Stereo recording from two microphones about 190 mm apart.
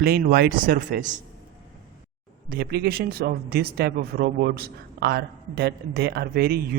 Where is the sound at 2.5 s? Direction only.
55° right (ahead or behind).